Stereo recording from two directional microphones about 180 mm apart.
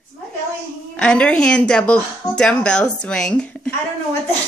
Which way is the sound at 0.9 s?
5° left (ahead or behind).